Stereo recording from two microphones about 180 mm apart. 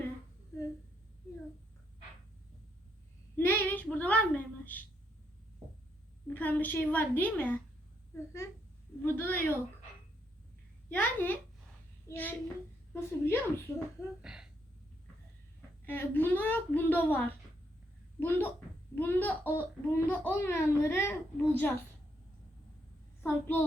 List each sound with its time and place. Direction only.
3.3 s child singing: 10° left (ahead or behind)
4.6 s a woman's voice: 10° left (ahead or behind)
6.2 s a child's voice: 10° left (ahead or behind)
10.8 s a child's voice: 10° left (ahead or behind)
14.2 s speech: 5° right (ahead or behind)
15.9 s a child's voice: 10° left (ahead or behind)
23.2 s a child's voice: 10° left (ahead or behind)